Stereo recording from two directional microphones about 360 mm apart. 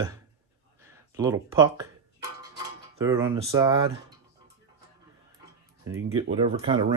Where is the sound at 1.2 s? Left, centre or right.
Centre.